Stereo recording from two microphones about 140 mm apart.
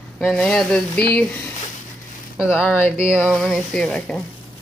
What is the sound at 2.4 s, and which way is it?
Speech, 15° left (ahead or behind).